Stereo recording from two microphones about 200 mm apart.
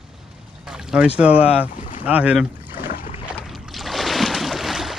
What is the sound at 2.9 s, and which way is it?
Boat, 45° left (ahead or behind).